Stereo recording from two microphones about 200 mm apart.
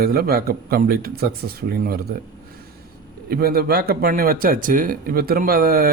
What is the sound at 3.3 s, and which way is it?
Speech, 50° right (ahead or behind).